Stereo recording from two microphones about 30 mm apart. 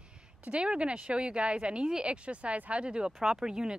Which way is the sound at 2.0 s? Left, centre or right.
Right.